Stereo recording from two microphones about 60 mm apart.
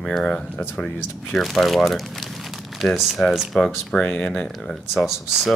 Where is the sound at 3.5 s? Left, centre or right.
Centre.